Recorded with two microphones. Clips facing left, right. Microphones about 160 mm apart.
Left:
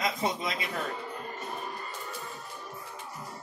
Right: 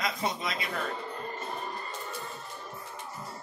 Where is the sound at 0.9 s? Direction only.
5° left (ahead or behind).